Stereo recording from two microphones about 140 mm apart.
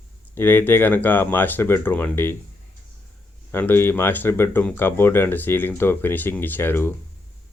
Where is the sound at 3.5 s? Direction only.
15° left (ahead or behind).